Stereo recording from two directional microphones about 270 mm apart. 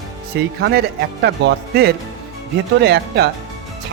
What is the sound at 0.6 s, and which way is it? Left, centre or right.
Speech, right.